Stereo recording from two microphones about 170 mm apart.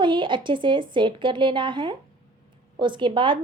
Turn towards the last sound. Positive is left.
turn(degrees=-30)  # may be behind; listen again after turning